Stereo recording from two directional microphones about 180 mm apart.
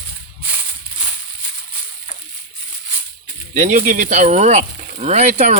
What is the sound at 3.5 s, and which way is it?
Speech, 40° right (ahead or behind).